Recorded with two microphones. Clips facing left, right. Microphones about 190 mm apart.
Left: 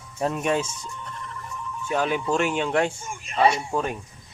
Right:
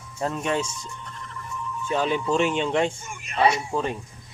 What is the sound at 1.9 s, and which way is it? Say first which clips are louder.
Speech: even; 10° left (ahead or behind).